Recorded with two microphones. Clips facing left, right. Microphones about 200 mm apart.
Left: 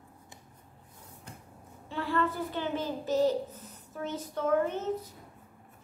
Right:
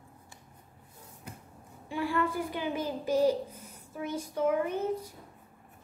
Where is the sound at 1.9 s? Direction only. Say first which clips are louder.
Even; 10° right (ahead or behind).